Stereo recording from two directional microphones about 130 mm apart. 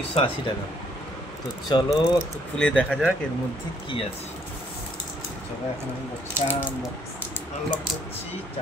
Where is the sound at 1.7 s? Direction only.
35° left (ahead or behind).